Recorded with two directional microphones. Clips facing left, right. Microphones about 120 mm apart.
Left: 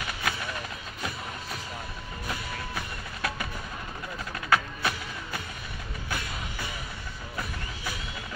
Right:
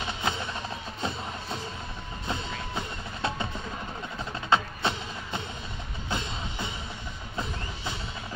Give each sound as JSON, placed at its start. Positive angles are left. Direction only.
{"t": 0.0, "sound": "music", "side_deg": -25}
{"t": 2.2, "sound": "wood block", "side_deg": -25}
{"t": 6.0, "sound": "music", "side_deg": -25}